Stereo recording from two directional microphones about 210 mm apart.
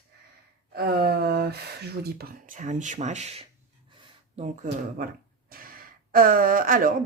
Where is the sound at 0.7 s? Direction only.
50° right (ahead or behind).